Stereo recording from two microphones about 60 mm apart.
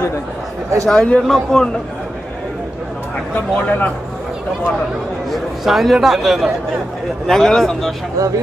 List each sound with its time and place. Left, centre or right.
0.8 s a man's voice: centre
3.3 s speech: left
5.3 s a man's voice: centre
7.2 s a man's voice: centre
8.2 s speech: right